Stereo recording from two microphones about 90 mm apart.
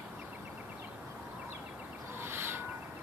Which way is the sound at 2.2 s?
25° right (ahead or behind).